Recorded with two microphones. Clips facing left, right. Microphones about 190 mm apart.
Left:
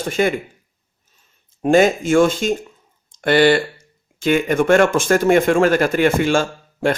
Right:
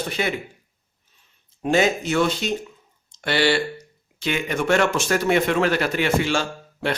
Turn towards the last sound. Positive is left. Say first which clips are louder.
# left 6 dB
turn(degrees=50)  # may be behind; listen again after turning